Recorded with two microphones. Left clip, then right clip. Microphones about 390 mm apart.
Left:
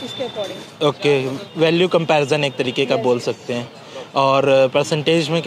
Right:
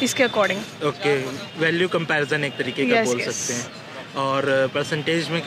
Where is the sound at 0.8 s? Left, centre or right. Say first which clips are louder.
Left 6 dB; left.